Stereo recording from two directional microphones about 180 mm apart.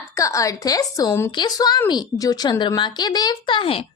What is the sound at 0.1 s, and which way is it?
A woman's voice, 15° left (ahead or behind).